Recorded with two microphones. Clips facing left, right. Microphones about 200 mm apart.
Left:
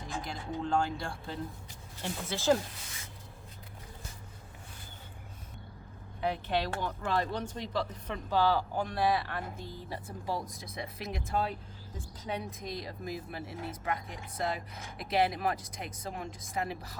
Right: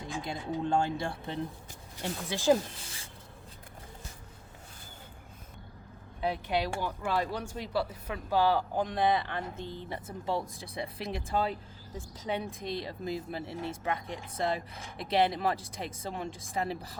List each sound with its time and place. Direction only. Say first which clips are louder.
0.2 s speech: right 4 dB; 25° right (ahead or behind)
6.3 s speech: right 1 dB; 10° right (ahead or behind); by 11.2 s 30° right (ahead or behind)
12.3 s speech: right 3 dB; 30° right (ahead or behind)